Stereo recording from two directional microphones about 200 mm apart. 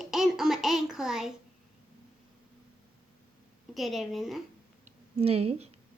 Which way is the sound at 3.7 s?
Centre (ahead or behind).